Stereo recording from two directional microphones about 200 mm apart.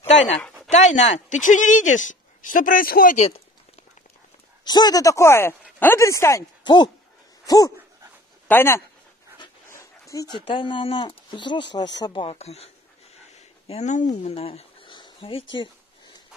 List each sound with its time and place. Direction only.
0.0 s speech: 35° left (ahead or behind)
4.6 s speech: 20° left (ahead or behind)
9.4 s dog: 15° left (ahead or behind)
12.0 s speech: 25° left (ahead or behind)
13.3 s a sound: 35° left (ahead or behind)